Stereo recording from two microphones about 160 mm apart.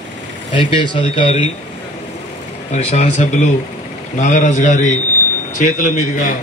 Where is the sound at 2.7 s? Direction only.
45° left (ahead or behind).